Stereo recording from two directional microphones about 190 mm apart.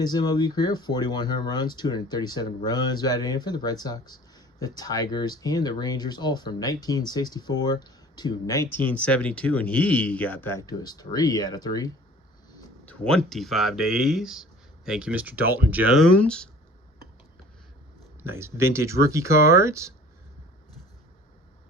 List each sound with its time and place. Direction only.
0.0 s speech: 20° left (ahead or behind)
8.9 s speech: 5° left (ahead or behind)
12.8 s speech: 5° left (ahead or behind)
16.2 s speech: 5° left (ahead or behind)
18.2 s speech: 15° right (ahead or behind)